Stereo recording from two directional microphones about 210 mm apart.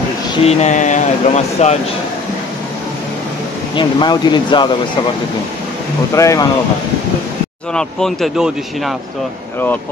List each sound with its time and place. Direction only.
0.5 s speech: 35° left (ahead or behind)
3.7 s speech: 20° left (ahead or behind)
6.1 s speech: 15° left (ahead or behind)
7.7 s speech: centre (ahead or behind)